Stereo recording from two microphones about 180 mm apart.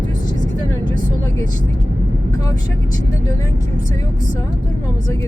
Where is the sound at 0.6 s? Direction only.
20° left (ahead or behind).